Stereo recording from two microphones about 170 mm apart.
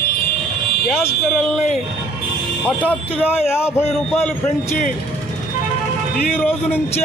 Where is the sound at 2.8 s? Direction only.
10° right (ahead or behind).